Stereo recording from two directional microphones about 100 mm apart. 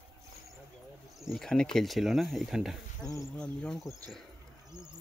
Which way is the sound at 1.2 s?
Centre (ahead or behind).